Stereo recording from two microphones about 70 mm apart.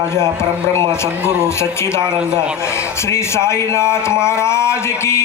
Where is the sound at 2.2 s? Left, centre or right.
Centre.